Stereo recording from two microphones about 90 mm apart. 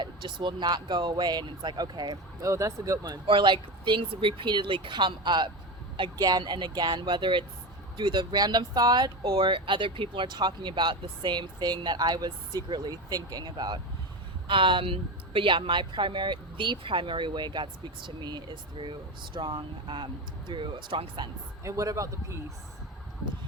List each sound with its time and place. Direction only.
0.0 s speech: 60° right (ahead or behind)
2.4 s a man's voice: 35° right (ahead or behind)
3.2 s speech: 65° right (ahead or behind); by 9.4 s 45° right (ahead or behind)
9.4 s speech: 65° right (ahead or behind)
14.4 s speech: 70° right (ahead or behind)
21.6 s a man's voice: 35° right (ahead or behind)